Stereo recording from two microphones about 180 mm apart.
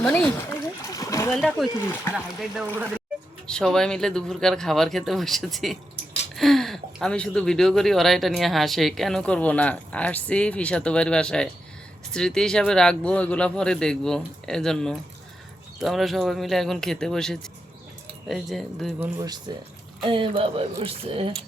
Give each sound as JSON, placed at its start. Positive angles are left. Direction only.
{"t": 0.0, "sound": "speech", "side_deg": 5}
{"t": 0.8, "sound": "splash", "side_deg": 20}
{"t": 1.3, "sound": "speech", "side_deg": 0}
{"t": 1.8, "sound": "speech", "side_deg": 15}
{"t": 19.2, "sound": "speech", "side_deg": -20}